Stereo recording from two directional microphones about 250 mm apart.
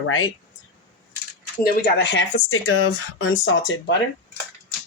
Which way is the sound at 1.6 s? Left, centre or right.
Left.